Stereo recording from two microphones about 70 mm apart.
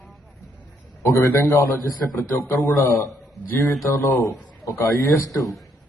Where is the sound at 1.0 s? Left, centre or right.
Left.